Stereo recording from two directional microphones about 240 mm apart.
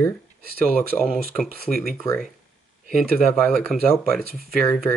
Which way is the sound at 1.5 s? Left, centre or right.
Right.